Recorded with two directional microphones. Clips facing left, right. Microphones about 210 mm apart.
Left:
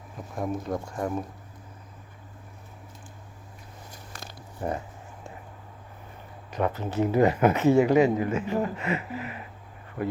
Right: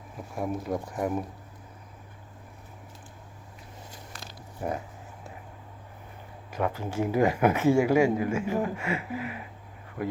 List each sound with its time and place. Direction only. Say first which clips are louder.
0.3 s speech: even; 5° right (ahead or behind)
4.1 s a sound: left 2 dB; 50° left (ahead or behind)
4.6 s speech: left 1 dB; 5° right (ahead or behind)
6.5 s speech: left 2 dB; 10° right (ahead or behind)